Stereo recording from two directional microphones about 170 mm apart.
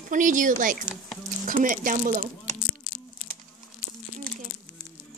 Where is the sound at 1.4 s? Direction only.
55° right (ahead or behind).